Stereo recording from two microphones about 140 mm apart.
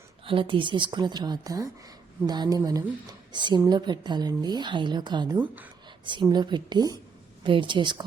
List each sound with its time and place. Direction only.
0.3 s a woman's voice: 40° right (ahead or behind)